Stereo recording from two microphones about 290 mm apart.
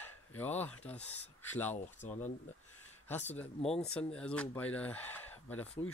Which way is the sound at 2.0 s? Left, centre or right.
Left.